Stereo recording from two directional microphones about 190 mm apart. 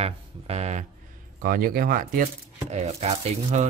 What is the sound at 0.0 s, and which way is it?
Speech, 35° right (ahead or behind).